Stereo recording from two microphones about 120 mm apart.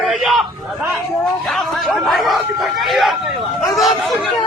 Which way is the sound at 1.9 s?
Centre (ahead or behind).